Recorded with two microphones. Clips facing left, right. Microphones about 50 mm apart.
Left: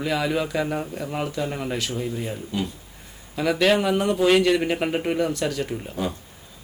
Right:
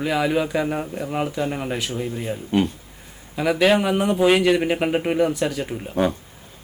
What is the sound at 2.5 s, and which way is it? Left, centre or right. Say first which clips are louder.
Speech: right 10 dB; right.